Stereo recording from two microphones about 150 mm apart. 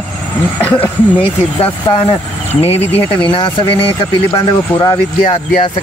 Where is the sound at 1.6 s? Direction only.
40° left (ahead or behind).